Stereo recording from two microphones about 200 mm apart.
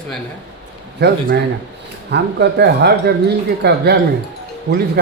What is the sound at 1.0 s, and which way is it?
Speech, 55° right (ahead or behind).